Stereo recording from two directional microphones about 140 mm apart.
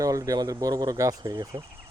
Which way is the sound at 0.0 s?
25° right (ahead or behind).